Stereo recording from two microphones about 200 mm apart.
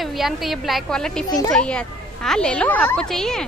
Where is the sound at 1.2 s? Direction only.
20° left (ahead or behind).